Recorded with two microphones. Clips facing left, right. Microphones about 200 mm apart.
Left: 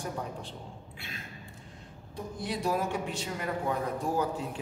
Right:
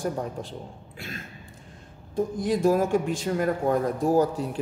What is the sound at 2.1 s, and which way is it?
A man's voice, 45° right (ahead or behind).